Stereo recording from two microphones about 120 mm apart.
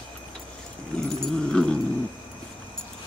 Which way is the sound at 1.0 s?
5° left (ahead or behind).